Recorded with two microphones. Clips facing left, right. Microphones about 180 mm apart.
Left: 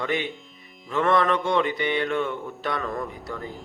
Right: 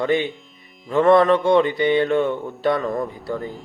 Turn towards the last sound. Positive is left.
turn(degrees=-25)  # may be behind; listen again after turning